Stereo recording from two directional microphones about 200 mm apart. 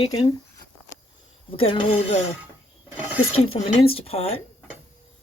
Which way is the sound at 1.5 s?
25° left (ahead or behind).